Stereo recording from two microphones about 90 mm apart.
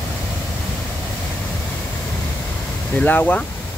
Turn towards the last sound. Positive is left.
turn(degrees=20)  # may be behind; listen again after turning